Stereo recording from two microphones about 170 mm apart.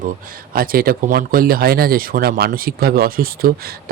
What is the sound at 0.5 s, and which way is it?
Speech, 60° right (ahead or behind).